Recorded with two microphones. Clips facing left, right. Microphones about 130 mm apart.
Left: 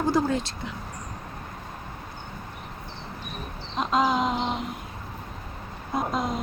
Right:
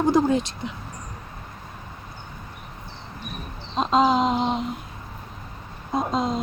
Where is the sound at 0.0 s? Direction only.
20° right (ahead or behind).